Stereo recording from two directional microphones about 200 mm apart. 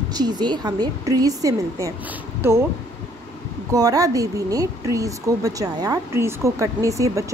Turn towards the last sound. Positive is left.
turn(degrees=-15)  # may be behind; listen again after turning